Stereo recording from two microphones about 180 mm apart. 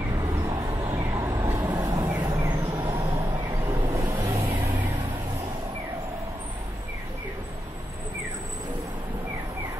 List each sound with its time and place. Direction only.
0.1 s vehicle: 20° right (ahead or behind)
4.4 s vehicle: 25° right (ahead or behind)